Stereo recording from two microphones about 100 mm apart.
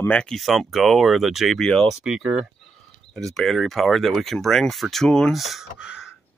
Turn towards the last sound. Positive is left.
turn(degrees=-5)  # may be behind; listen again after turning